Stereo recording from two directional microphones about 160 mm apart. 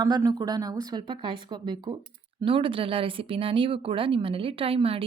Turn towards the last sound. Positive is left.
turn(degrees=-35)  # may be behind; listen again after turning